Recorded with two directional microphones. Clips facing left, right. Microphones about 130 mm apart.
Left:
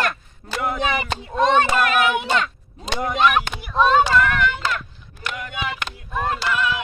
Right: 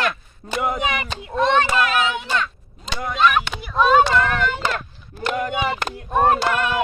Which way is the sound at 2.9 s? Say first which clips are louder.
Even; 15° left (ahead or behind).